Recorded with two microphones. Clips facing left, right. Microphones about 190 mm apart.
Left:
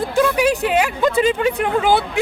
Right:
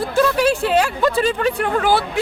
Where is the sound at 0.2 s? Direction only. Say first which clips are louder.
Even; 15° left (ahead or behind).